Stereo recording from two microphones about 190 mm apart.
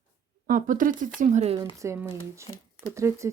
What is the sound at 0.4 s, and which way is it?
Speech, 45° right (ahead or behind).